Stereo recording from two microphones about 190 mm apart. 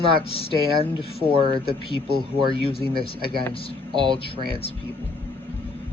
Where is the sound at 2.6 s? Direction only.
30° left (ahead or behind).